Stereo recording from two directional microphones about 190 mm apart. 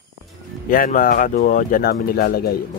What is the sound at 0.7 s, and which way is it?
Speech, 45° left (ahead or behind).